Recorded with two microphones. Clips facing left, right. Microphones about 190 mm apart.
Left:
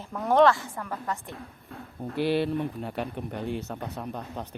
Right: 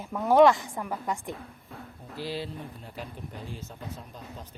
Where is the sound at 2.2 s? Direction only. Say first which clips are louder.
Left 10 dB; 65° left (ahead or behind).